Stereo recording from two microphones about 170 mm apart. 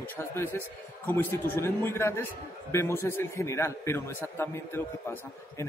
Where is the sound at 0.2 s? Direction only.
15° left (ahead or behind).